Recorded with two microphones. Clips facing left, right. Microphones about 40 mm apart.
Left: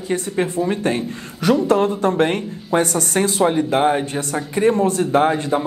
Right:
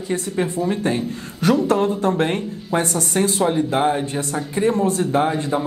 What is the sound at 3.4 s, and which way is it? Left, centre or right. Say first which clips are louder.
Speech: left 3 dB; left.